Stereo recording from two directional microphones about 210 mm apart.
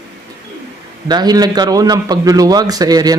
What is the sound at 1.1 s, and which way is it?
Speech, 20° right (ahead or behind).